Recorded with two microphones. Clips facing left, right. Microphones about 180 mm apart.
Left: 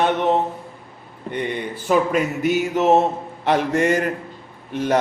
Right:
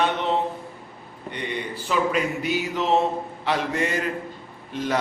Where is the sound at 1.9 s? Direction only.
50° left (ahead or behind).